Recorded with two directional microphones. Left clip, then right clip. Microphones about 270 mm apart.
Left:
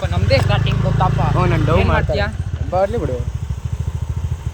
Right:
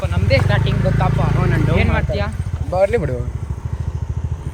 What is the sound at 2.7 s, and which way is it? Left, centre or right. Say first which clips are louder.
Speech: right 2 dB; right.